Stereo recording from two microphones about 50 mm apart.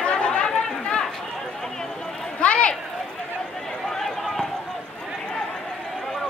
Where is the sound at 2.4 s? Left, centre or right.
Left.